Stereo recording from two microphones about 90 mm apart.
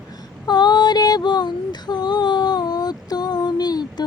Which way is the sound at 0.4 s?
55° left (ahead or behind).